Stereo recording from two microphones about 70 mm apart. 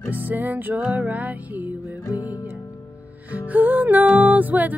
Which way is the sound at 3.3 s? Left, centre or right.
Right.